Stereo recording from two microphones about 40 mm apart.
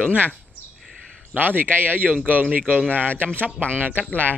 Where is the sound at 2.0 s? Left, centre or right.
Right.